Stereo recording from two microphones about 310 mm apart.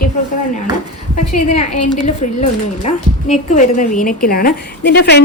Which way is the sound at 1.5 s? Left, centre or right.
Left.